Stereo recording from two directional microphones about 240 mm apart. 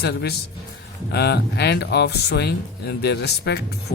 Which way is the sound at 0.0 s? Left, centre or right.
Left.